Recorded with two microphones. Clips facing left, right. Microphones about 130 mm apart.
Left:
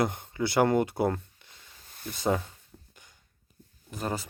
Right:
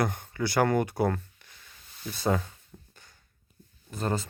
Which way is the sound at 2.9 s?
15° left (ahead or behind).